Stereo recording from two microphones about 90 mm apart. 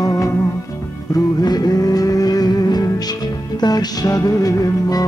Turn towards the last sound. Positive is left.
turn(degrees=40)  # may be behind; listen again after turning